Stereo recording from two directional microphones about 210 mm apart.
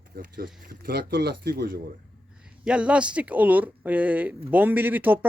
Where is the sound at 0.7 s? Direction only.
45° right (ahead or behind).